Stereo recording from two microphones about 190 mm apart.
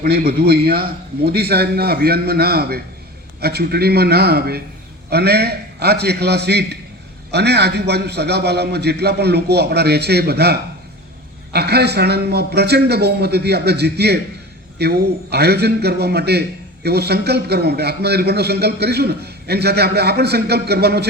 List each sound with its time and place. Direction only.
0.0 s a man's voice: 55° right (ahead or behind)